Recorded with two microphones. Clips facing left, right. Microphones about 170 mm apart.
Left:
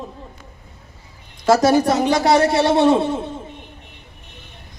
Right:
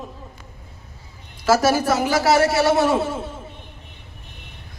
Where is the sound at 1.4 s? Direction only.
25° left (ahead or behind).